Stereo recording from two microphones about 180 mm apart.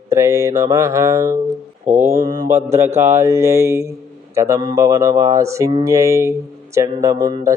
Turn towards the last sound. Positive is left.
turn(degrees=-20)  # may be behind; listen again after turning